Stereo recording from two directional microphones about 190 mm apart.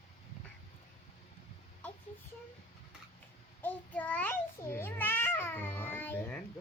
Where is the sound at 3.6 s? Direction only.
10° left (ahead or behind).